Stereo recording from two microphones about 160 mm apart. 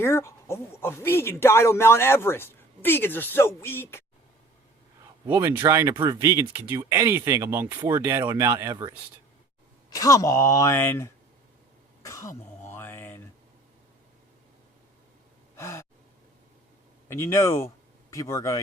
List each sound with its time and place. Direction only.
0.0 s speech: 15° left (ahead or behind)
5.3 s speech: 15° right (ahead or behind)
9.9 s speech: 20° left (ahead or behind)
12.0 s cough: 20° left (ahead or behind)
12.6 s mantra: 15° left (ahead or behind)
15.5 s gasp: 15° left (ahead or behind)
17.1 s speech: 15° left (ahead or behind)